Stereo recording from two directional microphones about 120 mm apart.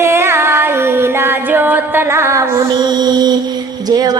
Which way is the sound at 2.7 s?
35° right (ahead or behind).